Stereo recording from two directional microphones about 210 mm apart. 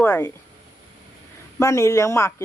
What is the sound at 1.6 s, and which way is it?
Speech, 15° left (ahead or behind).